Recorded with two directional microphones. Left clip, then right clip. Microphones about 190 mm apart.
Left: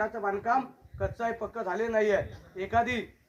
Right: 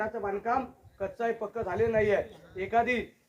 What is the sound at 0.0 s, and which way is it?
Speech, 15° left (ahead or behind).